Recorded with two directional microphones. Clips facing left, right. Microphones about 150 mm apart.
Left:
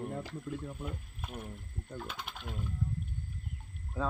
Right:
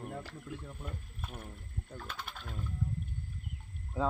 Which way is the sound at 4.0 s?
20° right (ahead or behind).